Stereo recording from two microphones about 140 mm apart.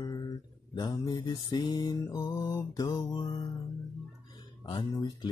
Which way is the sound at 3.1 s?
35° left (ahead or behind).